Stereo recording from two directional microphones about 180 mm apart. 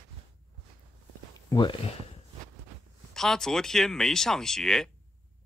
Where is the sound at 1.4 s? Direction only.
20° left (ahead or behind).